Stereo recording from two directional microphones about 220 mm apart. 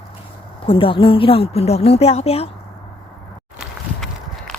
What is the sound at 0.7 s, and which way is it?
A woman's voice, 25° left (ahead or behind).